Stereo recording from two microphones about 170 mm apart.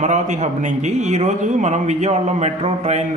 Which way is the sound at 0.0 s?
45° right (ahead or behind).